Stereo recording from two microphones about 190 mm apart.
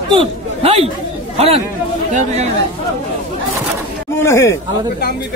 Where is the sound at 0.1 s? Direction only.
30° right (ahead or behind).